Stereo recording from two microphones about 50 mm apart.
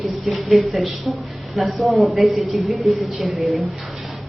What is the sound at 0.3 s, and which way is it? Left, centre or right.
A woman's voice, centre.